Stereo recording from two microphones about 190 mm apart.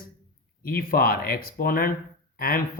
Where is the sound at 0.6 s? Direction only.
50° left (ahead or behind).